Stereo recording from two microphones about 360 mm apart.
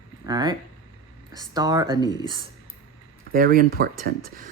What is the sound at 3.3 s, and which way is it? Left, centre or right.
Speech, right.